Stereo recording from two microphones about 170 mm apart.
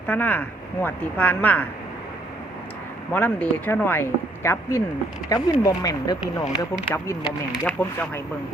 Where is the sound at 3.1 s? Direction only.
10° left (ahead or behind).